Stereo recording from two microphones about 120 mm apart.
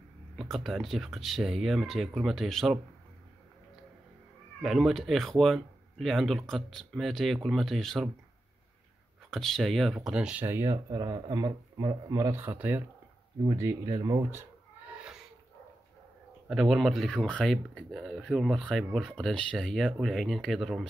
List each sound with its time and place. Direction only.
0.4 s speech: centre (ahead or behind)
4.6 s speech: centre (ahead or behind)
9.3 s speech: 5° left (ahead or behind)
10.4 s speech: 25° right (ahead or behind)
10.9 s a man's voice: 40° right (ahead or behind)
12.4 s speech: 15° right (ahead or behind)
16.4 s speech: 5° right (ahead or behind)